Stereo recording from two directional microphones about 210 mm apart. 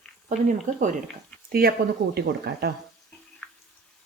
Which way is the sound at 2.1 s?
50° right (ahead or behind).